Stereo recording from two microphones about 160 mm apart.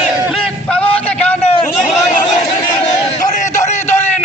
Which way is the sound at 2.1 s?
45° left (ahead or behind).